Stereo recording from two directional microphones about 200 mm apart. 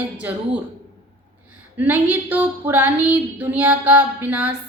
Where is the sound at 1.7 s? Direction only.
10° right (ahead or behind).